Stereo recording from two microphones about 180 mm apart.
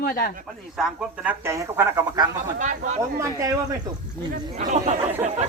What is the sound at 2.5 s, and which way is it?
Speech, 45° right (ahead or behind).